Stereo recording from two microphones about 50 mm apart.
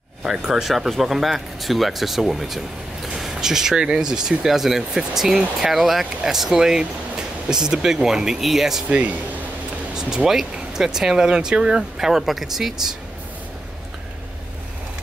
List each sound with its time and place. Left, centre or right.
0.3 s speech: centre
8.8 s speech: right
9.9 s speech: centre